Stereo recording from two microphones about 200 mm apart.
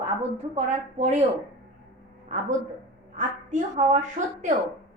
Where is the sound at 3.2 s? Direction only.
40° right (ahead or behind).